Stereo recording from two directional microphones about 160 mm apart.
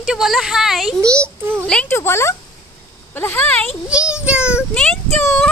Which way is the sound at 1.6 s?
5° left (ahead or behind).